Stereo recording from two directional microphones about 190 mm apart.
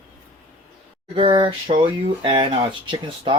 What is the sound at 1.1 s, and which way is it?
Speech, 25° right (ahead or behind).